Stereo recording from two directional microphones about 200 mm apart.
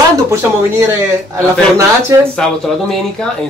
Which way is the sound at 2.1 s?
20° right (ahead or behind).